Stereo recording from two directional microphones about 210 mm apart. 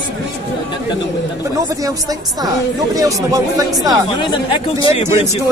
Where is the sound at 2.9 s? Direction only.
15° right (ahead or behind).